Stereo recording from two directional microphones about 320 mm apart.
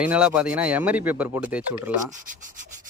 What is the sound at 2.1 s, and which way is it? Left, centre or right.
Rub, right.